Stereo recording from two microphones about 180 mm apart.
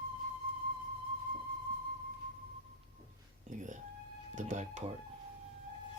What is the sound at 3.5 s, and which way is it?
Speech, 45° right (ahead or behind).